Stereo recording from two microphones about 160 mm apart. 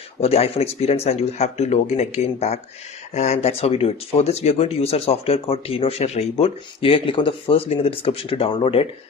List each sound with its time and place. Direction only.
0.2 s speech: 40° left (ahead or behind)